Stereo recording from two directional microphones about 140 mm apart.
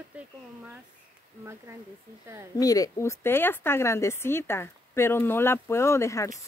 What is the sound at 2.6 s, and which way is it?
A woman's voice, 25° left (ahead or behind).